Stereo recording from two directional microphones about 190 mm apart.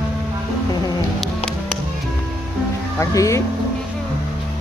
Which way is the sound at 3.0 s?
15° left (ahead or behind).